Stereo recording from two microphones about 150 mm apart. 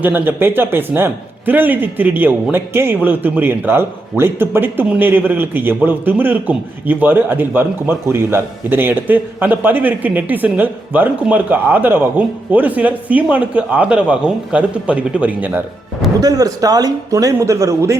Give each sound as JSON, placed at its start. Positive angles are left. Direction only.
{"t": 0.0, "sound": "speech", "side_deg": -15}
{"t": 16.2, "sound": "a man's voice", "side_deg": -25}